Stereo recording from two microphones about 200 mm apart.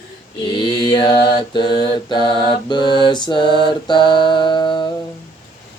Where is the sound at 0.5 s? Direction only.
20° left (ahead or behind).